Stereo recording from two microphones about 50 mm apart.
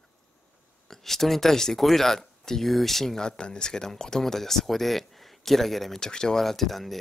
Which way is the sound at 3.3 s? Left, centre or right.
Centre.